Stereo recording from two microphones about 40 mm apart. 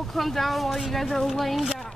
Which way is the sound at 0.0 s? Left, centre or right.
Centre.